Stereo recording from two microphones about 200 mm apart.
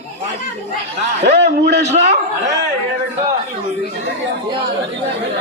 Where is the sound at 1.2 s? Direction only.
55° right (ahead or behind).